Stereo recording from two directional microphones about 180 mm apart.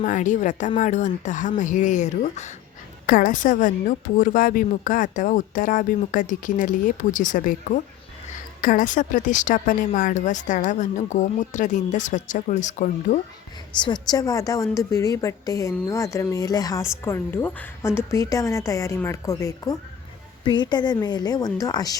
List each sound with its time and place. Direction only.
0.0 s a woman's voice: 45° left (ahead or behind)
3.1 s a woman's voice: 50° left (ahead or behind)
13.7 s a woman's voice: 25° left (ahead or behind)